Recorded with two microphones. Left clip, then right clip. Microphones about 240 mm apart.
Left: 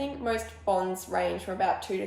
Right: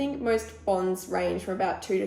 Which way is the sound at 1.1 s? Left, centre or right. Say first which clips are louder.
Right 1 dB; left.